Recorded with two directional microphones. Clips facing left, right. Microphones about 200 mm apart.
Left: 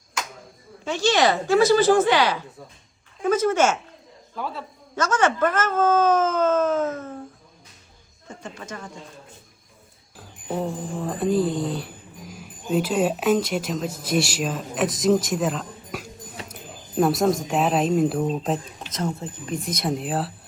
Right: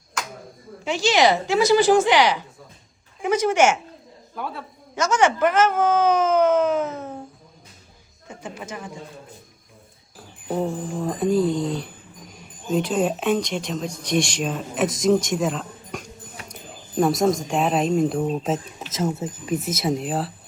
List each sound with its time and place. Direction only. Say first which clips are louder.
0.9 s speech: right 1 dB; 15° right (ahead or behind)
4.4 s speech: even; centre (ahead or behind)
5.1 s speech: right 3 dB; 15° right (ahead or behind)
8.3 s speech: right 2 dB; 10° right (ahead or behind)
10.2 s speech: right 2 dB; centre (ahead or behind)